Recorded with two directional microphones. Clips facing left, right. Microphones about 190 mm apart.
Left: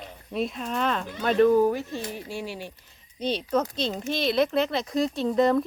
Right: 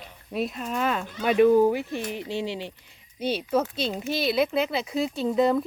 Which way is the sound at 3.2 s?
5° right (ahead or behind).